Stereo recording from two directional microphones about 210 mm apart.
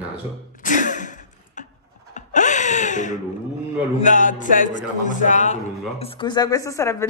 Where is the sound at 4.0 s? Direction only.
40° left (ahead or behind).